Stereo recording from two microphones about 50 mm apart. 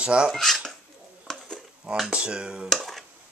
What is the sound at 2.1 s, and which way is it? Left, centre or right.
Speech, centre.